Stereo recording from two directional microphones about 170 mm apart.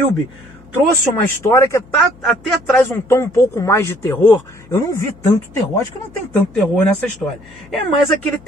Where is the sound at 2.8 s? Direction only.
15° left (ahead or behind).